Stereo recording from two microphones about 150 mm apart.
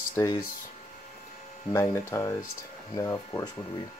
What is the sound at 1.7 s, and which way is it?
Speech, 20° left (ahead or behind).